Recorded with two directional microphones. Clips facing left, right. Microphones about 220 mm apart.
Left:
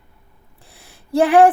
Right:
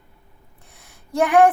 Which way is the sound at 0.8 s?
30° left (ahead or behind).